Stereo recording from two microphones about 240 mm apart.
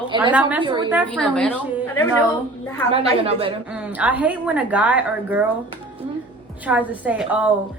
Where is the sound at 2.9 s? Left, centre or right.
Right.